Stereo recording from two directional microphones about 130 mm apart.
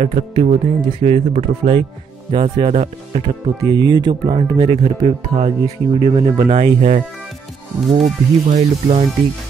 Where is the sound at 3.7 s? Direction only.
35° right (ahead or behind).